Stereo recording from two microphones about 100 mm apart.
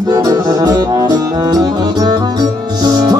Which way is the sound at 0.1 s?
40° right (ahead or behind).